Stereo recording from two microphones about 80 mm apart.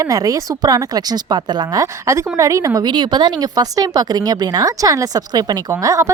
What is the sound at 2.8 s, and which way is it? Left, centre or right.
Speech, right.